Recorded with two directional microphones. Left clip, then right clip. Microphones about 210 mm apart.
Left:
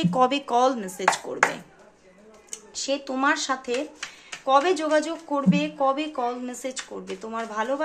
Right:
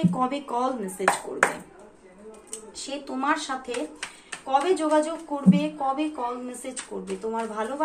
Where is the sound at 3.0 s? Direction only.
50° left (ahead or behind).